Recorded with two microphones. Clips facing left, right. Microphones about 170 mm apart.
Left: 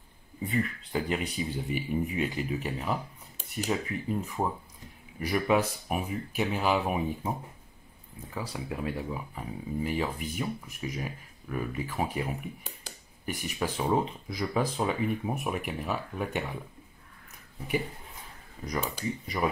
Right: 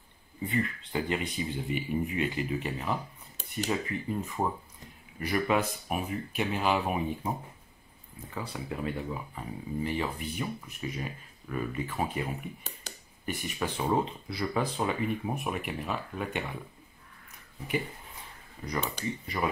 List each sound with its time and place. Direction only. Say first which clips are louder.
0.5 s speech: left 1 dB; 5° left (ahead or behind)
8.4 s speech: left 1 dB; 10° left (ahead or behind)
12.8 s a sound: even; 5° left (ahead or behind)
13.8 s speech: even; 5° left (ahead or behind)
18.7 s speech: left 1 dB; 5° left (ahead or behind)